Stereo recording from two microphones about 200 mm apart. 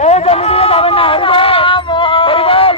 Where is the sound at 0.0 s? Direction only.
30° left (ahead or behind).